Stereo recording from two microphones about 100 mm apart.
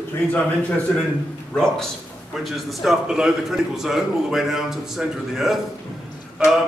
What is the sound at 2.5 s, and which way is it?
A man's voice, centre (ahead or behind).